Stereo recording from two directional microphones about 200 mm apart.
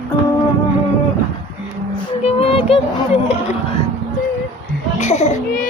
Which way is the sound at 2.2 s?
30° left (ahead or behind).